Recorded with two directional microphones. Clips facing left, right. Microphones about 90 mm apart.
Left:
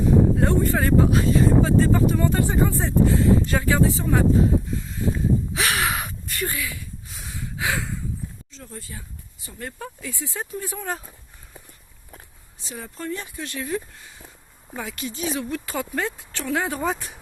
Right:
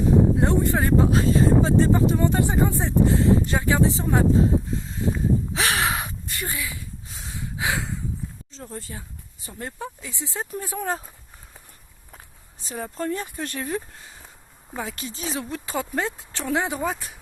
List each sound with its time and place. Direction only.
0.3 s speech: 20° right (ahead or behind)
5.5 s crow: 30° right (ahead or behind)
6.4 s a sound: 20° right (ahead or behind)
8.5 s speech: 35° right (ahead or behind)
12.5 s speech: 40° right (ahead or behind); by 16.8 s 20° right (ahead or behind)
16.8 s speech: centre (ahead or behind)